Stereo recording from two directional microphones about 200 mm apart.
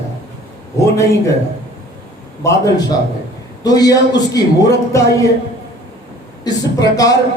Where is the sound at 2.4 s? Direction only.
20° left (ahead or behind).